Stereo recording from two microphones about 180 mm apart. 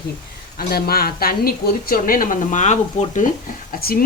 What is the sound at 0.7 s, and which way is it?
Speech, 60° left (ahead or behind).